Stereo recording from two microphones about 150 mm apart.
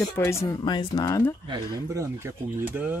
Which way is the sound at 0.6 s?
30° left (ahead or behind).